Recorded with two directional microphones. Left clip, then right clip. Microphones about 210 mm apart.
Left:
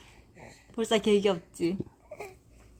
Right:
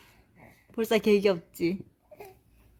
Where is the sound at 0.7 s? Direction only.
25° right (ahead or behind).